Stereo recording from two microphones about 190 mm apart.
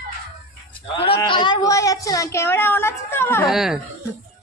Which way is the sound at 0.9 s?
25° left (ahead or behind).